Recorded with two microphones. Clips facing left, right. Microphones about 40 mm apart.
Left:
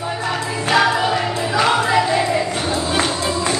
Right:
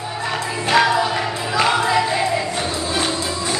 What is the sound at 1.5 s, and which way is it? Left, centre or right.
Music, centre.